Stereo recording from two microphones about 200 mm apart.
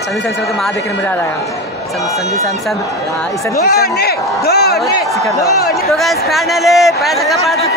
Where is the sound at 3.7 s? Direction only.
50° left (ahead or behind).